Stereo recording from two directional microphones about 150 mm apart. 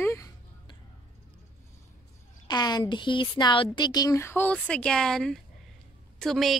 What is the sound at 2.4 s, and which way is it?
Speech, 30° left (ahead or behind).